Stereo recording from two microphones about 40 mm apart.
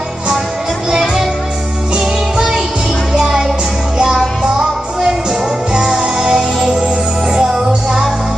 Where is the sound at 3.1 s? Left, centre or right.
Centre.